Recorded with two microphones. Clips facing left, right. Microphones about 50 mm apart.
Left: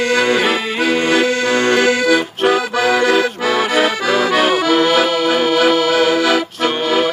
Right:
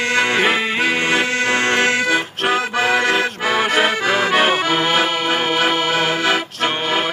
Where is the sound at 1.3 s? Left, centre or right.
Right.